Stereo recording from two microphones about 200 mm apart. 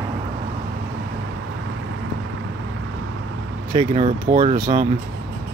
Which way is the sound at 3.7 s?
30° right (ahead or behind).